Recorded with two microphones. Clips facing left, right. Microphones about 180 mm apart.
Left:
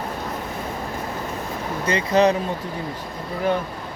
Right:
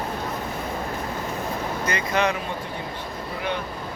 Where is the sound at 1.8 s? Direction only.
35° left (ahead or behind).